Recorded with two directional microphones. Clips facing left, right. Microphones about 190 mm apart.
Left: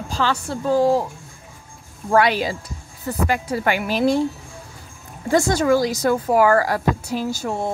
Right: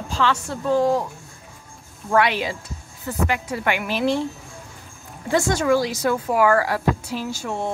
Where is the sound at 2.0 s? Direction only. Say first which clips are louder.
Left 2 dB; 35° left (ahead or behind).